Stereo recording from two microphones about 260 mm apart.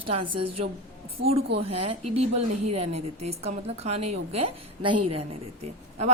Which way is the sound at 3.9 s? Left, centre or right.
Right.